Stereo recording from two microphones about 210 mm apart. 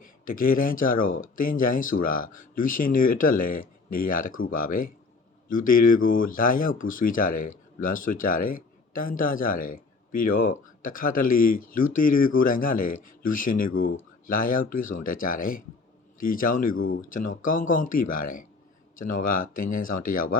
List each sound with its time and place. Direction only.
0.0 s speech: 40° left (ahead or behind)